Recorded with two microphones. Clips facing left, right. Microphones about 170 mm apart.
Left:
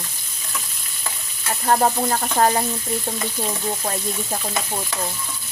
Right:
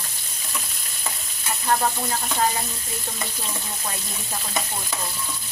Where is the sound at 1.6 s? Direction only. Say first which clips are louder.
Left 5 dB; 45° left (ahead or behind).